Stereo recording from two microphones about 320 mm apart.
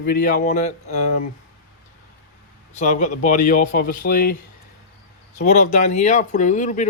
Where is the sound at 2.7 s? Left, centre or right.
Left.